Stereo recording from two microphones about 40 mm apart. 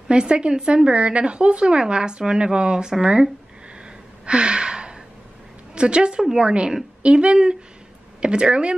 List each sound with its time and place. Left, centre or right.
0.1 s speech: right
4.3 s gasp: right
5.8 s speech: right